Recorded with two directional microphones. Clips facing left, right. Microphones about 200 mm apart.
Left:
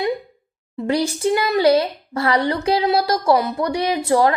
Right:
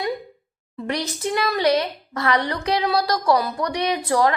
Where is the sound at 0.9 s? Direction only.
30° left (ahead or behind).